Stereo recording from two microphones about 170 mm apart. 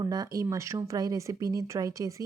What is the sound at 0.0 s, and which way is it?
Speech, 20° right (ahead or behind).